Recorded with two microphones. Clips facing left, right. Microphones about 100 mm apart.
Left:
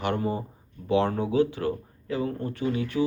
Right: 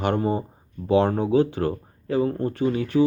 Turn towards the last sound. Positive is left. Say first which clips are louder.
# right 6 dB
turn(degrees=-35)  # may be behind; listen again after turning